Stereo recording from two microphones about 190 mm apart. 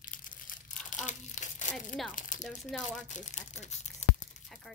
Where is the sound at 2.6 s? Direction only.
Centre (ahead or behind).